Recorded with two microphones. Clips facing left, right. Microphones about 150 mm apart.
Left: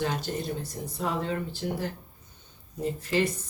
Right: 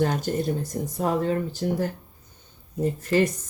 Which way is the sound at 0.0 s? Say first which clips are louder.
Right 6 dB; 45° right (ahead or behind).